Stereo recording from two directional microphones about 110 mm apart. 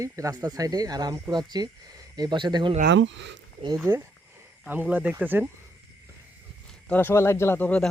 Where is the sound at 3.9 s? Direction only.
25° right (ahead or behind).